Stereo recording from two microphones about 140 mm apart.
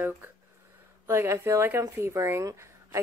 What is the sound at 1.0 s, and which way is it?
A woman's voice, 20° right (ahead or behind).